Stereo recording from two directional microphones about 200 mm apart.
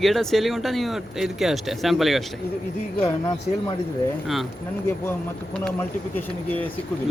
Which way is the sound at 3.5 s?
40° left (ahead or behind).